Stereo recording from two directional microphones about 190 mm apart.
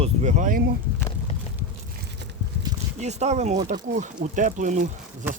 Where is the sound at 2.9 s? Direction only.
35° right (ahead or behind).